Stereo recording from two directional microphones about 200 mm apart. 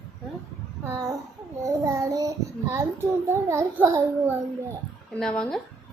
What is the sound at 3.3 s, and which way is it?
A child's voice, 15° right (ahead or behind).